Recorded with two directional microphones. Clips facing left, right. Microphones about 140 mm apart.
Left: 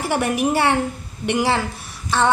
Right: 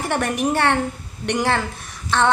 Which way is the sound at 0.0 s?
5° left (ahead or behind).